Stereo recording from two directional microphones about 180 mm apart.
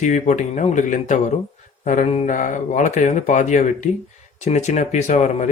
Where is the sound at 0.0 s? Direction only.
45° left (ahead or behind).